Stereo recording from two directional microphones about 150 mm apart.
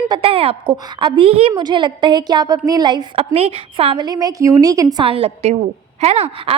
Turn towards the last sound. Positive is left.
turn(degrees=-40)  # may be behind; listen again after turning